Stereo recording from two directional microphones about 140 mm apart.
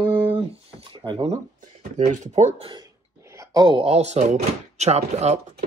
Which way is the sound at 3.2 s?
20° right (ahead or behind).